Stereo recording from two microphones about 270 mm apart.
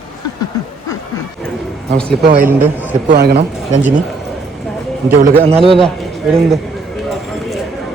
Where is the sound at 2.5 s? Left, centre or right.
Centre.